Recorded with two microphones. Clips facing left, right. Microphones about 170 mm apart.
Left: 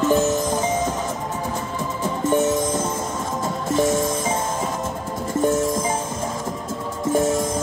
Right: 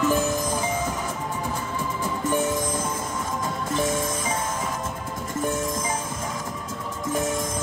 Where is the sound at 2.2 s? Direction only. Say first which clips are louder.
Left 6 dB; 25° left (ahead or behind).